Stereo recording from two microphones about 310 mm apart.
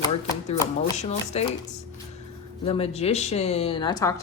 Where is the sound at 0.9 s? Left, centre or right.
Left.